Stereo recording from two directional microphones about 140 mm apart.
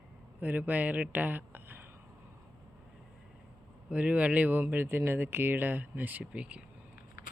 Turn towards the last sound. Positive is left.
turn(degrees=-10)  # may be behind; listen again after turning